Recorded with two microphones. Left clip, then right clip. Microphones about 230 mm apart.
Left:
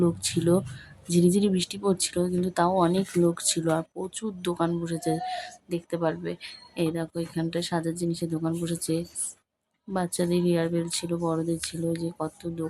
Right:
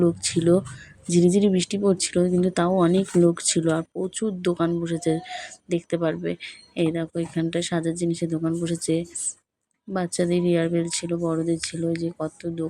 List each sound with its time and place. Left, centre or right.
0.0 s speech: centre